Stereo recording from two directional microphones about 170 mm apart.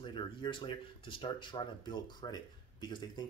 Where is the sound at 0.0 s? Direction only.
30° left (ahead or behind).